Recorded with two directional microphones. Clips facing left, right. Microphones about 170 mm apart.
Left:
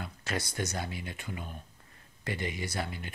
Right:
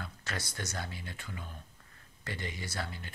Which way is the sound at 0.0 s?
15° left (ahead or behind).